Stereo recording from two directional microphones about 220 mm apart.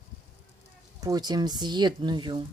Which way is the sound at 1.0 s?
20° right (ahead or behind).